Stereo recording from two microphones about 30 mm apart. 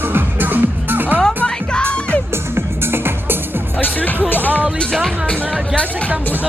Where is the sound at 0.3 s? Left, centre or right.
Right.